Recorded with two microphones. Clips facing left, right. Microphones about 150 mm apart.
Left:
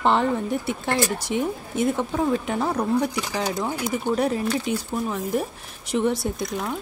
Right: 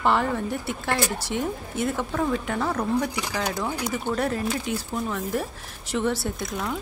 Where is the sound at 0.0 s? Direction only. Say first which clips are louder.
Left 2 dB; 20° left (ahead or behind).